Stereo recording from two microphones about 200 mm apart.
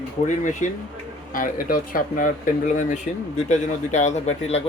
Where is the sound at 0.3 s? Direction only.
40° left (ahead or behind).